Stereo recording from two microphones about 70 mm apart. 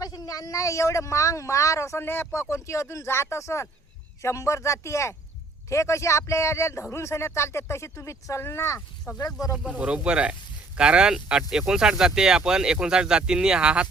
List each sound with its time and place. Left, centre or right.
0.0 s speech: left
9.2 s speech: left
9.7 s speech: centre